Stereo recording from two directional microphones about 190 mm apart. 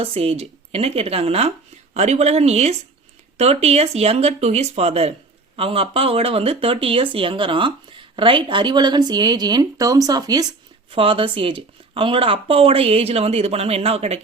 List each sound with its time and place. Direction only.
0.0 s speech: 30° right (ahead or behind)